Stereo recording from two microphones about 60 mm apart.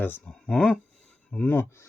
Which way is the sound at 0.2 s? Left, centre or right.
Centre.